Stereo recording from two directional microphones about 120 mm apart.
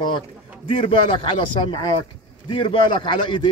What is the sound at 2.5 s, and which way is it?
Speech, 45° left (ahead or behind).